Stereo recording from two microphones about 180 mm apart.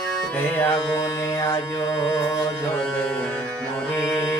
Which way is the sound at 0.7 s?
20° left (ahead or behind).